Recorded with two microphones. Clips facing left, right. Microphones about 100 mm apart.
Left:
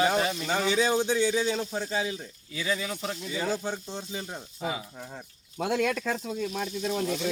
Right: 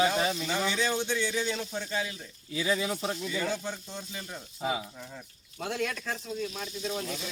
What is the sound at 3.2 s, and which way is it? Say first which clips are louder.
Speech: left 2 dB; 15° left (ahead or behind).